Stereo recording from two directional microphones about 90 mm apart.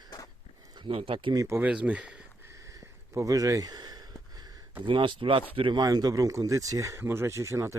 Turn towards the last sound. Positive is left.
turn(degrees=-35)  # may be behind; listen again after turning